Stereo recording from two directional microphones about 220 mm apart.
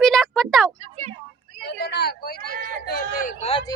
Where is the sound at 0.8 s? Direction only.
30° right (ahead or behind).